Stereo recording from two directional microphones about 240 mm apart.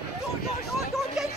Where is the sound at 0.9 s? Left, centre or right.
Centre.